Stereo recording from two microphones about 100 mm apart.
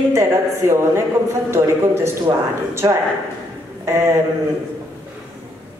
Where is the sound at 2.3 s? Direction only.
45° right (ahead or behind).